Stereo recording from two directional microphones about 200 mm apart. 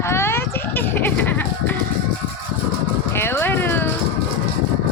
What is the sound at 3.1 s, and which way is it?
Speech, 10° left (ahead or behind).